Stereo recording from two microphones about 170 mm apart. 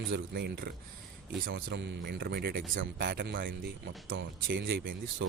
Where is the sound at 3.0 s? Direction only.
80° right.